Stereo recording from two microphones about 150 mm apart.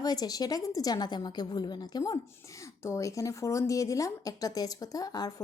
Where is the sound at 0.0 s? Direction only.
25° left (ahead or behind).